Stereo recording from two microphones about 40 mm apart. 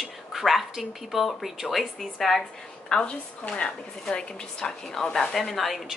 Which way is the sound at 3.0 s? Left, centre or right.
Left.